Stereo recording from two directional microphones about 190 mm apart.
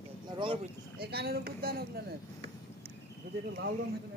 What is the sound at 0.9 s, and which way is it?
Speech, 55° right (ahead or behind).